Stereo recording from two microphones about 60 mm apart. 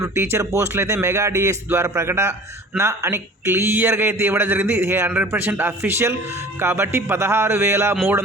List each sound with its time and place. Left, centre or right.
0.0 s a man's voice: right